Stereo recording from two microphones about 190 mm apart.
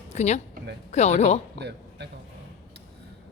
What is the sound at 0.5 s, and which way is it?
Speech, 65° right (ahead or behind).